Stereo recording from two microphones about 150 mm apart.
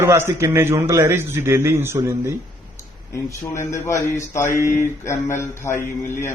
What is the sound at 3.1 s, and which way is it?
A man's voice, 20° left (ahead or behind).